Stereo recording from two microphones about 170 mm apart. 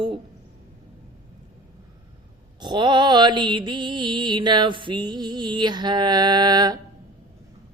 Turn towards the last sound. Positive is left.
turn(degrees=-25)  # may be behind; listen again after turning